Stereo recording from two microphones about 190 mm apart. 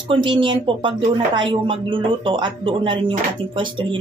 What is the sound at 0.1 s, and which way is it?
Speech, 25° right (ahead or behind).